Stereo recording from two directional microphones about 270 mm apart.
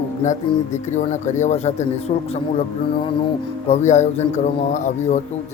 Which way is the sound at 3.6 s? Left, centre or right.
Left.